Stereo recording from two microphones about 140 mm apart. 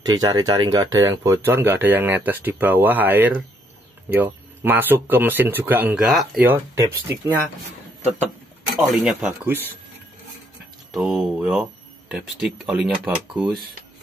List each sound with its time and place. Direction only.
0.0 s speech: 30° right (ahead or behind); by 6.5 s 5° right (ahead or behind)
6.5 s speech: 15° right (ahead or behind)
8.7 s speech: centre (ahead or behind)
9.2 s speech: 10° right (ahead or behind)
10.9 s speech: 5° right (ahead or behind)